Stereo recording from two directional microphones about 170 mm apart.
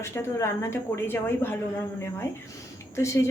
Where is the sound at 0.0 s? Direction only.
15° left (ahead or behind).